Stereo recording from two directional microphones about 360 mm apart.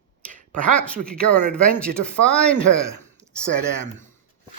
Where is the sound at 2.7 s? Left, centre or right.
Right.